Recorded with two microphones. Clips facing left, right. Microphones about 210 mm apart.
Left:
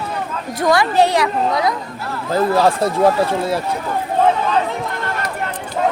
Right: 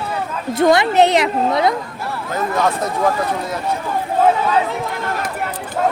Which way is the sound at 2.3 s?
30° left (ahead or behind).